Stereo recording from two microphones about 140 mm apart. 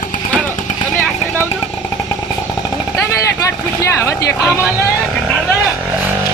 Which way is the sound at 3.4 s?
25° left (ahead or behind).